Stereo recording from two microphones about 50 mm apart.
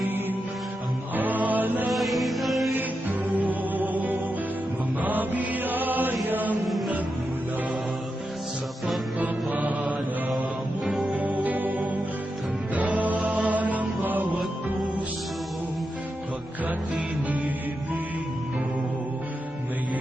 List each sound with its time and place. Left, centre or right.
1.1 s music: right
1.9 s music: centre
2.7 s music: right
5.0 s mantra: right
6.2 s chant: right
6.7 s music: centre
9.1 s music: right
16.6 s music: right